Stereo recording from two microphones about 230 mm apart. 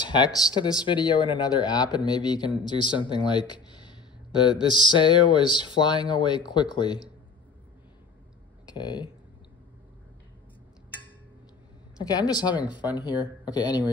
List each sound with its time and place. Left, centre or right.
0.1 s speech: centre
8.7 s speech: centre
12.0 s speech: centre